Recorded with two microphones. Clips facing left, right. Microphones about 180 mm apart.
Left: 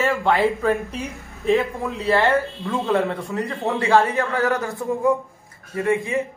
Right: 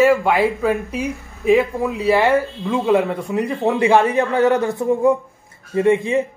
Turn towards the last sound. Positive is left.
turn(degrees=-25)  # may be behind; listen again after turning